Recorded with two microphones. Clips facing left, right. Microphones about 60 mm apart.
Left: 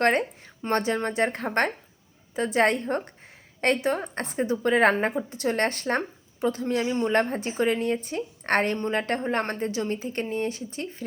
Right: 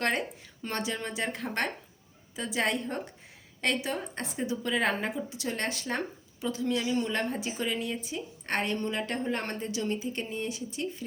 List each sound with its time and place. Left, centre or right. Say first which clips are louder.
0.0 s a woman's voice: left 7 dB; left